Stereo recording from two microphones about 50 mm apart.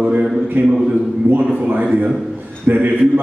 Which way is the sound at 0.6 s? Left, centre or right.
Right.